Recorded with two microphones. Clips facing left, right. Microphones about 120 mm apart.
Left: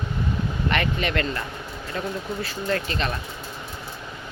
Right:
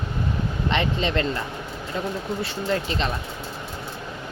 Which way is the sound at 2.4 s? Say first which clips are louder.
Even; 20° right (ahead or behind).